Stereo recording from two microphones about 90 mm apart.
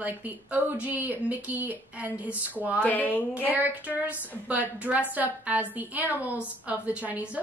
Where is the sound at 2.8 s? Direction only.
20° left (ahead or behind).